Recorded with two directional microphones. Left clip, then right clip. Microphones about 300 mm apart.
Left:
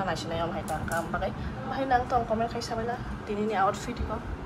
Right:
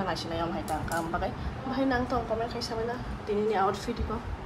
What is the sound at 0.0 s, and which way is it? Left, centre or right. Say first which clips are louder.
Speech: left 1 dB; centre.